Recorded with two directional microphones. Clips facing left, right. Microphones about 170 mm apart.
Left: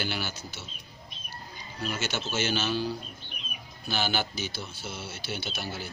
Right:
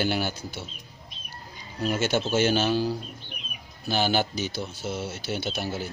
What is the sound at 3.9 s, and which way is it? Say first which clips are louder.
Speech: right 6 dB; 40° right (ahead or behind).